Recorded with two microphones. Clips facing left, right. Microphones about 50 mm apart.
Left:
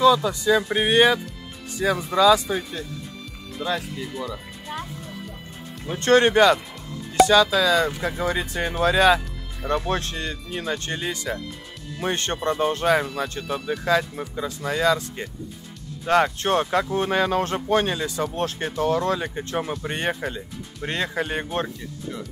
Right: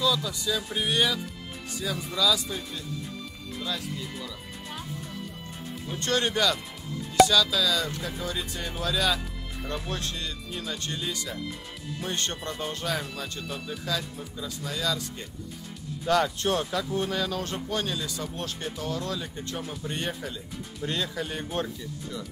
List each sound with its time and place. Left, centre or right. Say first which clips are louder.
0.0 s speech: left 10 dB; left
3.6 s speech: left 7 dB; left
5.9 s speech: left 10 dB; left
7.2 s speech: left 3 dB; centre
7.5 s speech: left 7 dB; left
12.4 s speech: left 16 dB; left